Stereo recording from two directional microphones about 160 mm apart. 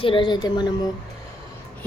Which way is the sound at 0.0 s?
30° left (ahead or behind).